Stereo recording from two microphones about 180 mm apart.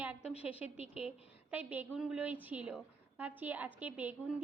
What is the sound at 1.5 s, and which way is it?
A woman's voice, 10° right (ahead or behind).